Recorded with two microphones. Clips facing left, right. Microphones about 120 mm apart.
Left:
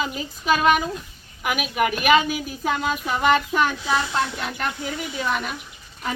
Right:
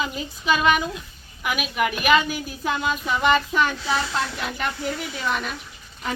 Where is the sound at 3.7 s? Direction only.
20° left (ahead or behind).